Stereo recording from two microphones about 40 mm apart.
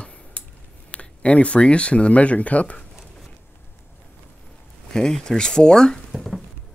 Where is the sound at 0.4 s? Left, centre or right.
Left.